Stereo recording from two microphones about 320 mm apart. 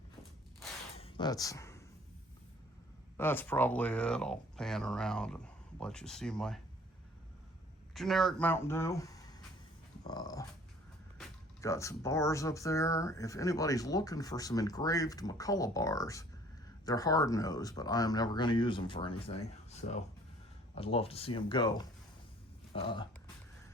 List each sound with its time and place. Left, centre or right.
0.9 s a sound: centre
3.2 s speech: centre
7.9 s speech: centre
10.0 s dog: centre
11.2 s speech: centre